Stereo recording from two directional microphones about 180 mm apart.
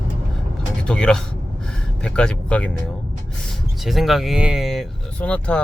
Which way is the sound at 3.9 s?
Centre (ahead or behind).